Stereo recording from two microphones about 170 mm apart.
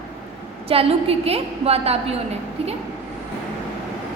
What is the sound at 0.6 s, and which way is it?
A woman's voice, 35° right (ahead or behind).